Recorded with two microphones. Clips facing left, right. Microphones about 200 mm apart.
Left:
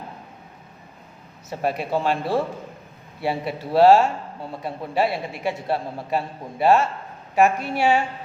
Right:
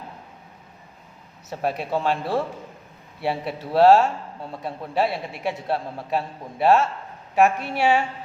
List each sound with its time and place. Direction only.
1.5 s a man's voice: centre (ahead or behind)